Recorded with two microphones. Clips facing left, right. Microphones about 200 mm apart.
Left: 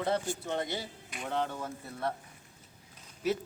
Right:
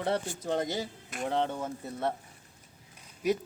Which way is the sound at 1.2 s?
25° right (ahead or behind).